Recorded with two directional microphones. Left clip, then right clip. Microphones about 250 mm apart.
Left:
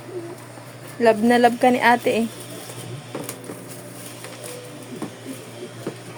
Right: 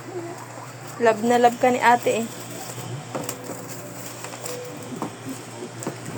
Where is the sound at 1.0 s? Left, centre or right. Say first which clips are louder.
Left 2 dB; left.